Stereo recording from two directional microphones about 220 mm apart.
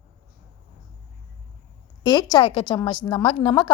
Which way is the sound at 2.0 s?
20° left (ahead or behind).